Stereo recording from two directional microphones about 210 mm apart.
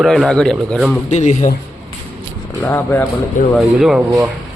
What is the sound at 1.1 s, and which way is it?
Speech, 35° left (ahead or behind).